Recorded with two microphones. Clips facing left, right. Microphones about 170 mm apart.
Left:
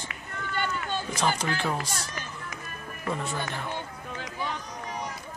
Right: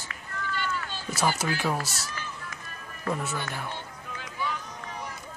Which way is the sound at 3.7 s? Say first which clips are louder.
Left 3 dB; 40° left (ahead or behind).